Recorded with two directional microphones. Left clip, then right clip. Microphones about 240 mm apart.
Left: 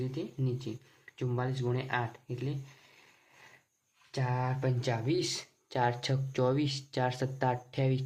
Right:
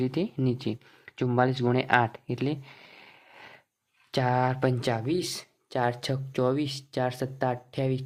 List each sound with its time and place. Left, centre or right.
0.0 s speech: right